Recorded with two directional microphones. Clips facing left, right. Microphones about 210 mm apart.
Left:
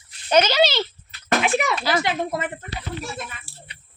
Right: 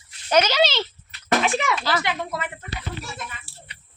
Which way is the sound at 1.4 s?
5° left (ahead or behind).